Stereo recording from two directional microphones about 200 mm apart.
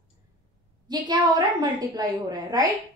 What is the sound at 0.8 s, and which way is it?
A woman's voice, 20° right (ahead or behind).